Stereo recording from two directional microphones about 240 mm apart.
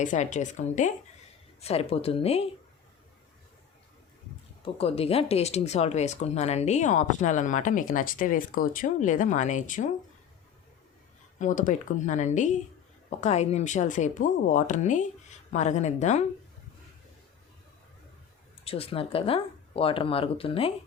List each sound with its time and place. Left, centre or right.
0.0 s speech: left
4.6 s speech: left
11.3 s speech: left
18.6 s speech: left